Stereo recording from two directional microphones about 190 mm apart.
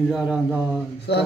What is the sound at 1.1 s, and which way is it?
Speech, 65° left (ahead or behind).